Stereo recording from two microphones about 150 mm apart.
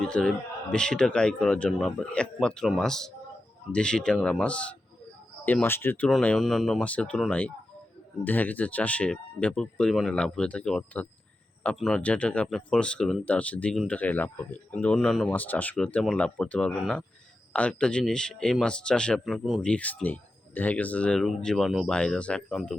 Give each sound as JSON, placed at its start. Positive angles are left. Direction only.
{"t": 0.1, "sound": "speech", "side_deg": 5}
{"t": 6.1, "sound": "speech", "side_deg": 5}